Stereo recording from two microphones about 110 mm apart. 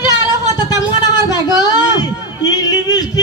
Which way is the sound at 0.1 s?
35° left (ahead or behind).